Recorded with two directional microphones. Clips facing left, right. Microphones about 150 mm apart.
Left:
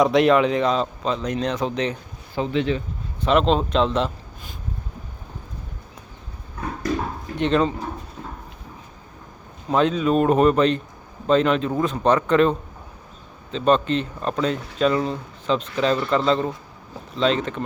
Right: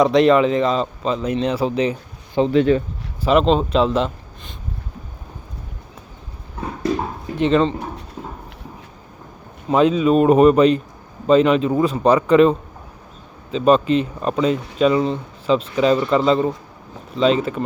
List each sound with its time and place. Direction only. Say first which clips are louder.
0.0 s speech: right 3 dB; centre (ahead or behind)
2.5 s speech: right 7 dB; 45° right (ahead or behind)
3.2 s speech: right 3 dB; centre (ahead or behind)
7.3 s speech: right 4 dB; centre (ahead or behind)
9.6 s a man's voice: right 4 dB; 5° right (ahead or behind)